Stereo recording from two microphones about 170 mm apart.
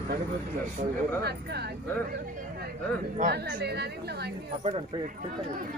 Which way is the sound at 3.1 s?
65° right (ahead or behind).